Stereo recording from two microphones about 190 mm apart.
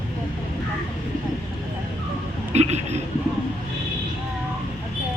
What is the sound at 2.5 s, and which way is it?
Speech, 35° right (ahead or behind).